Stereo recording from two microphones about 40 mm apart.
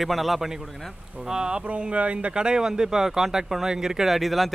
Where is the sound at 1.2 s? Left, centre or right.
Centre.